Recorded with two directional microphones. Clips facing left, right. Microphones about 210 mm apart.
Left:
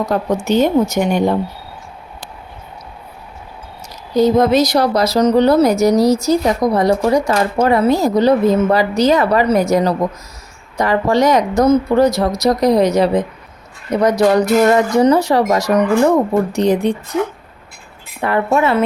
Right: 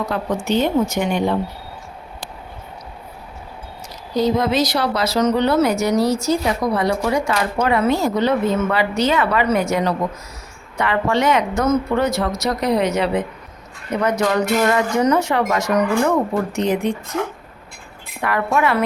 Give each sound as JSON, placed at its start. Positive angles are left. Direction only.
{"t": 0.0, "sound": "speech", "side_deg": 40}
{"t": 4.1, "sound": "speech", "side_deg": 45}
{"t": 18.2, "sound": "a woman's voice", "side_deg": 30}